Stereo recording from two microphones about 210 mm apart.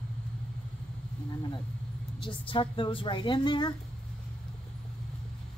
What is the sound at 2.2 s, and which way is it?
A woman's voice, 25° left (ahead or behind).